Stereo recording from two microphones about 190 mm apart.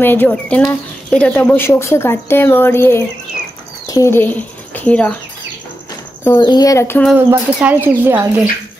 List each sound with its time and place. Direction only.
0.0 s speech: 10° left (ahead or behind)
6.4 s speech: 20° left (ahead or behind)
7.2 s speech: 10° right (ahead or behind)